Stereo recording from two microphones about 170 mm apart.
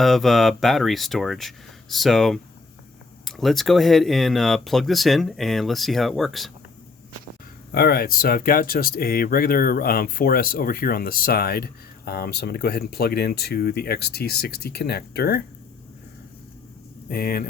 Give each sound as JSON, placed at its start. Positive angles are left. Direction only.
{"t": 0.0, "sound": "speech", "side_deg": 0}
{"t": 7.7, "sound": "speech", "side_deg": 65}
{"t": 17.1, "sound": "speech", "side_deg": 60}